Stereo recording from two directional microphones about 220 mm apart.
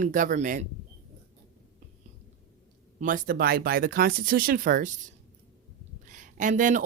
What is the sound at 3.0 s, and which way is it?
Speech, 40° right (ahead or behind).